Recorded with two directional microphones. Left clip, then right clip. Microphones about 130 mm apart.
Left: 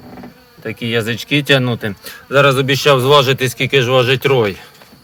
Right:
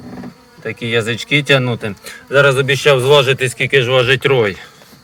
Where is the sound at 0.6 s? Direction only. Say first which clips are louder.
Right 1 dB; 20° left (ahead or behind).